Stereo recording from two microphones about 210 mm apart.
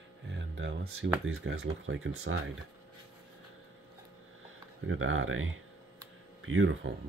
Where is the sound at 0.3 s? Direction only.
60° right (ahead or behind).